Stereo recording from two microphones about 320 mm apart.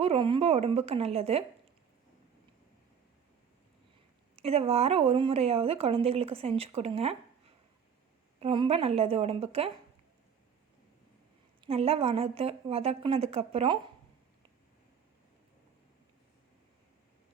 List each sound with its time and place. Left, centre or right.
0.0 s a woman's voice: centre
4.4 s a woman's voice: centre
11.6 s a woman's voice: centre